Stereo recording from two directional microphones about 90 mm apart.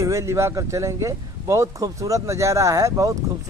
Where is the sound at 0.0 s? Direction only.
35° right (ahead or behind).